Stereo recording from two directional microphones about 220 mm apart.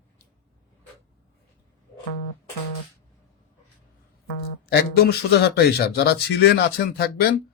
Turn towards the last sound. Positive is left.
turn(degrees=45)  # may be behind; listen again after turning